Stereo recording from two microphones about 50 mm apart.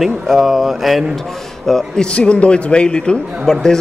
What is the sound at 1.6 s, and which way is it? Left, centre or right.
Speech, centre.